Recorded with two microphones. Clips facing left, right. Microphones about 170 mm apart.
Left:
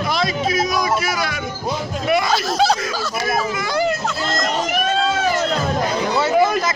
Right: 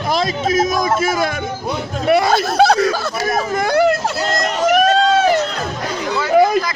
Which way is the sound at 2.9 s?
50° right (ahead or behind).